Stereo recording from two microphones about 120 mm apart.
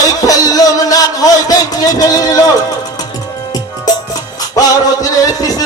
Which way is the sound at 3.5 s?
30° left (ahead or behind).